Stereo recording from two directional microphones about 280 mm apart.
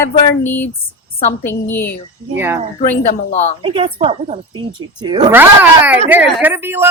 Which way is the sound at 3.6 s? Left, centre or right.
Centre.